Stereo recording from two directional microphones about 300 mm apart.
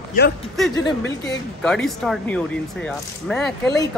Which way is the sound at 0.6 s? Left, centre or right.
Centre.